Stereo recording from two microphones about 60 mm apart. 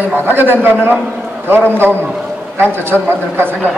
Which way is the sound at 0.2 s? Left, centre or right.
Right.